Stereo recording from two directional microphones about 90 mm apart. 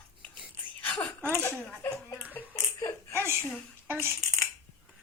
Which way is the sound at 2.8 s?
30° left (ahead or behind).